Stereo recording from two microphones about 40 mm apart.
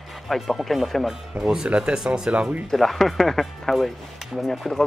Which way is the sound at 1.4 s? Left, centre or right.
Centre.